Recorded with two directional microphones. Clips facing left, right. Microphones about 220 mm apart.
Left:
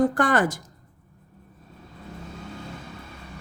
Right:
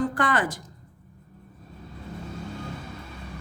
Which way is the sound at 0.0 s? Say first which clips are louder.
Left 4 dB; 45° left (ahead or behind).